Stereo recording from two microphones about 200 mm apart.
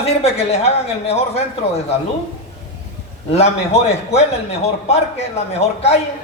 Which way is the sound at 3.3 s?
30° left (ahead or behind).